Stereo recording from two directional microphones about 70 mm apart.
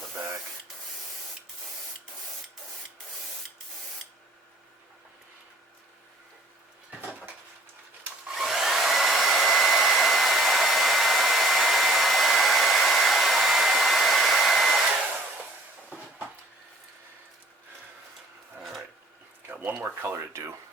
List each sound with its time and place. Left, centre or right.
8.4 s hair dryer: centre
19.5 s a sound: right
20.0 s speech: right